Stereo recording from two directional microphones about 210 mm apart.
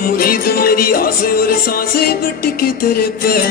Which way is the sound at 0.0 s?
45° left (ahead or behind).